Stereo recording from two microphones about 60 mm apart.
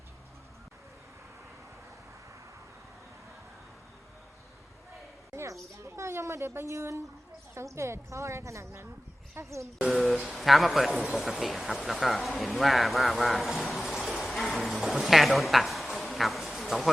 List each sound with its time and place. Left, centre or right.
5.3 s speech: right
9.9 s speech: centre